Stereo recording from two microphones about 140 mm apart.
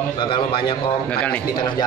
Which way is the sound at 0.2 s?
35° left (ahead or behind).